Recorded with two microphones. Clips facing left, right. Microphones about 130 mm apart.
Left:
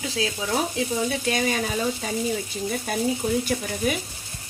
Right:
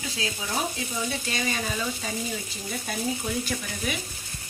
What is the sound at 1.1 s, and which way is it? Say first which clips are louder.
Speech: left 6 dB; 55° left (ahead or behind).